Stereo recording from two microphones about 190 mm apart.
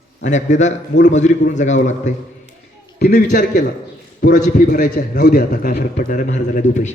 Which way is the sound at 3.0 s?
55° left (ahead or behind).